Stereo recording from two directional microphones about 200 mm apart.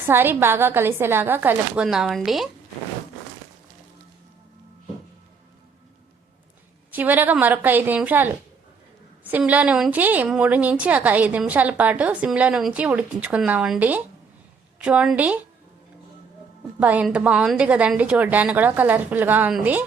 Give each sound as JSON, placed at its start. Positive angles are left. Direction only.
{"t": 0.0, "sound": "a woman's voice", "side_deg": -10}
{"t": 6.9, "sound": "a woman's voice", "side_deg": -10}
{"t": 16.8, "sound": "a woman's voice", "side_deg": -5}